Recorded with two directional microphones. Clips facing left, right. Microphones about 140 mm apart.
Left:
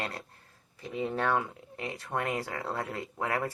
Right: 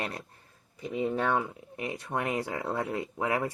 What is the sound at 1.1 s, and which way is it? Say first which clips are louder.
Speech: right 1 dB; 5° right (ahead or behind).